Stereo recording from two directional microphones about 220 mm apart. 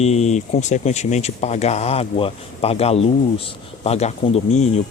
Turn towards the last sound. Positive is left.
turn(degrees=30)  # may be behind; listen again after turning